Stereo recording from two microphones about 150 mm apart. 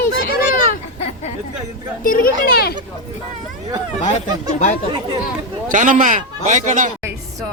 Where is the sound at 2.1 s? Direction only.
80° left.